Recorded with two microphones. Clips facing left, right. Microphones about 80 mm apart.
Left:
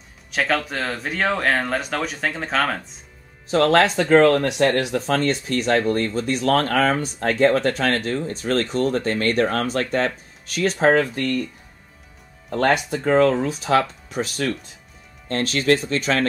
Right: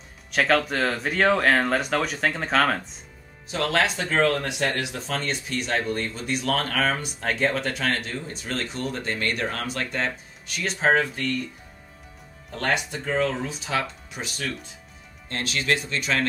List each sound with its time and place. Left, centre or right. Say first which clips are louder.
0.3 s speech: right 1 dB; centre
3.4 s speech: left 7 dB; left
13.0 s speech: left 12 dB; left